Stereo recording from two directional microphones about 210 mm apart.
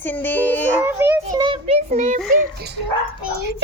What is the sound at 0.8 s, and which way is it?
Speech, 10° right (ahead or behind).